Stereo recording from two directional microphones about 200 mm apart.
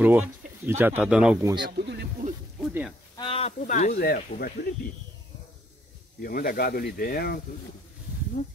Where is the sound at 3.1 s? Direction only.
25° left (ahead or behind).